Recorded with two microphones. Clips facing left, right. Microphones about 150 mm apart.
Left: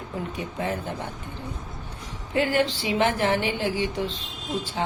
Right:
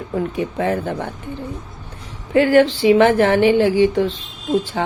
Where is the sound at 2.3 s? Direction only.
70° right (ahead or behind).